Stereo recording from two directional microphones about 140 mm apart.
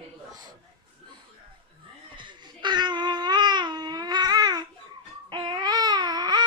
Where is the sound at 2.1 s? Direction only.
35° right (ahead or behind).